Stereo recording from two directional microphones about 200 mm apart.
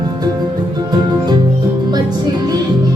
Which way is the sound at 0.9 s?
20° right (ahead or behind).